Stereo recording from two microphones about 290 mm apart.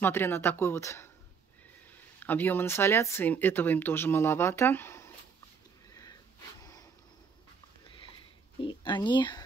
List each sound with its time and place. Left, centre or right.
0.0 s speech: centre
2.1 s speech: centre
5.9 s sniff: centre
6.6 s a sound: centre
8.5 s speech: centre